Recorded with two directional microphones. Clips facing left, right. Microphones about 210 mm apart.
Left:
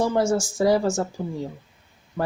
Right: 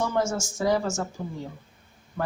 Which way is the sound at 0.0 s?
35° left (ahead or behind).